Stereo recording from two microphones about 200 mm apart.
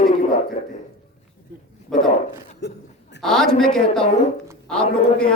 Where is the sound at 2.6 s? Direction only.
55° left (ahead or behind).